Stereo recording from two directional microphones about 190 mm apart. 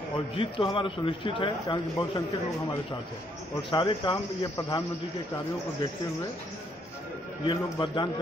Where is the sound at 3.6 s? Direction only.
25° left (ahead or behind).